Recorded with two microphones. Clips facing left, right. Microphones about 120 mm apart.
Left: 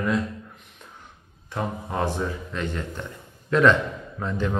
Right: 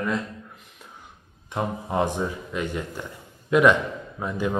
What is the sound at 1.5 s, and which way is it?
Speech, 15° right (ahead or behind).